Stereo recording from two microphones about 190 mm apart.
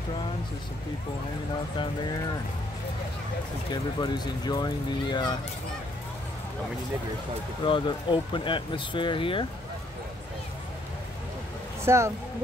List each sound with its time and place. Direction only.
3.7 s speech: 20° left (ahead or behind)
7.6 s speech: 25° left (ahead or behind)
11.8 s speech: 15° right (ahead or behind)